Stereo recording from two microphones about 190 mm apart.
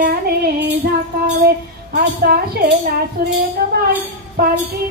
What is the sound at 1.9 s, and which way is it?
Speech, 55° right (ahead or behind).